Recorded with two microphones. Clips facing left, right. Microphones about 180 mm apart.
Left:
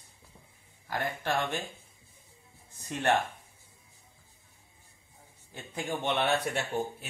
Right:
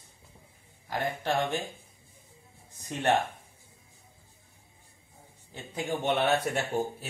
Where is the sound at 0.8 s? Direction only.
15° right (ahead or behind).